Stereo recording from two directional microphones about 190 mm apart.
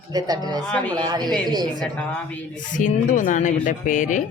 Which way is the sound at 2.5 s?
40° left (ahead or behind).